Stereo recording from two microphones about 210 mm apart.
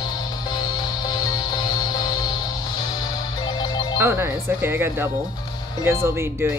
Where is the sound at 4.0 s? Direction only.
10° right (ahead or behind).